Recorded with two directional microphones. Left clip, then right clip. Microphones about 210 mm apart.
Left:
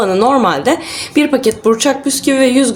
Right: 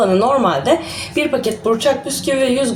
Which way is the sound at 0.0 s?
45° left (ahead or behind).